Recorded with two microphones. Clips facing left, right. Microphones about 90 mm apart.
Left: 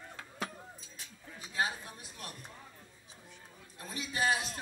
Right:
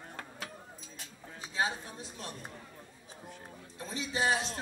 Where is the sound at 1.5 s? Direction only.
25° right (ahead or behind).